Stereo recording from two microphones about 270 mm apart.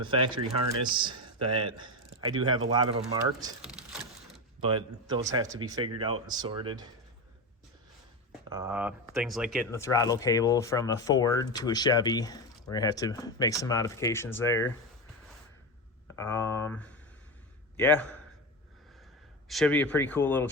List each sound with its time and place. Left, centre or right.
0.0 s speech: centre
3.6 s a sound: centre
4.6 s speech: centre
8.4 s speech: centre
9.7 s speech: centre
16.1 s speech: centre
19.5 s speech: centre